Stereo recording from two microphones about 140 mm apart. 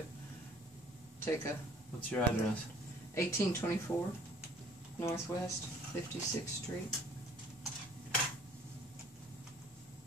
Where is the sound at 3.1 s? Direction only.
20° left (ahead or behind).